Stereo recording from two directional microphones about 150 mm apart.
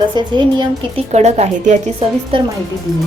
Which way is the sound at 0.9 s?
45° right (ahead or behind).